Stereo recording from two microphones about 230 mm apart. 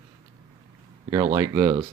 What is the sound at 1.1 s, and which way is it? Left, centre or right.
Speech, centre.